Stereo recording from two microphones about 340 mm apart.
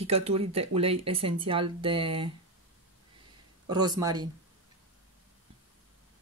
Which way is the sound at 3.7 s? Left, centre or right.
Centre.